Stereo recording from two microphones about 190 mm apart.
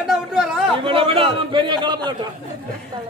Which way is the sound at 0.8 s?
30° right (ahead or behind).